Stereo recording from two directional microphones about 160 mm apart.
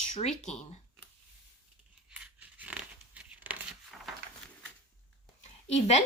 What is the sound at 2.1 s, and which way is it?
Tearing, 10° right (ahead or behind).